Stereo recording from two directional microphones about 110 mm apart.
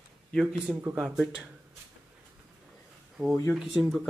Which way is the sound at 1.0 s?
5° right (ahead or behind).